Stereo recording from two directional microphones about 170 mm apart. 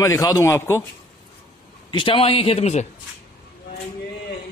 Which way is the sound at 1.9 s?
30° left (ahead or behind).